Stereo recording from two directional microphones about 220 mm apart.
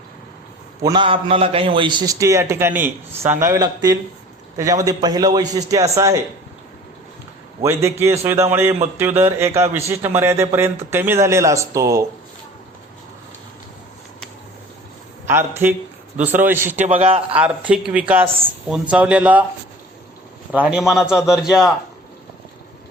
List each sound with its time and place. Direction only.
0.9 s a man's voice: 20° right (ahead or behind)
7.6 s a man's voice: 10° right (ahead or behind)
15.3 s a man's voice: 10° right (ahead or behind)
16.6 s a man's voice: 35° right (ahead or behind)
17.3 s a man's voice: 5° right (ahead or behind)
20.5 s a man's voice: 5° right (ahead or behind)